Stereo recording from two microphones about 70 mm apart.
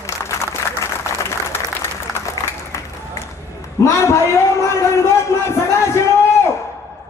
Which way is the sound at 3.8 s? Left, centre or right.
Left.